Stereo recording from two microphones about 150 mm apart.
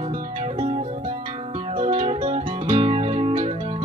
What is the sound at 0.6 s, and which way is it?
Music, 40° right (ahead or behind).